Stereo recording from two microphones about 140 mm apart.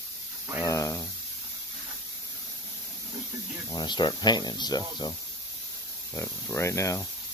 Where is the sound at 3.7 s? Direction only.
30° left (ahead or behind).